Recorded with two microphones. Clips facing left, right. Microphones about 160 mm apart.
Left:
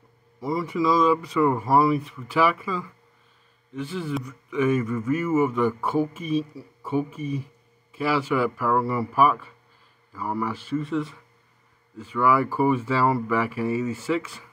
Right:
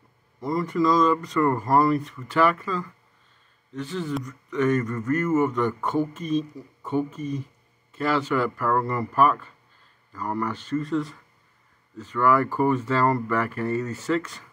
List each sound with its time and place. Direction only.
0.4 s speech: 5° left (ahead or behind)